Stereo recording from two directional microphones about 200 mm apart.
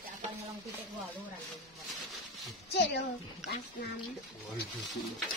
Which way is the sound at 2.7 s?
55° left (ahead or behind).